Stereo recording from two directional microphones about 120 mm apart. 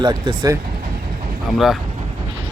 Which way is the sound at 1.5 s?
Centre (ahead or behind).